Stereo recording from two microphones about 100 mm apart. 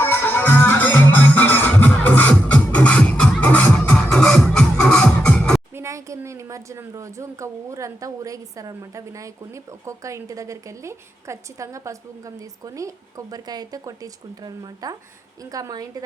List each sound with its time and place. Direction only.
0.0 s music: 20° left (ahead or behind)
5.7 s a woman's voice: 30° right (ahead or behind)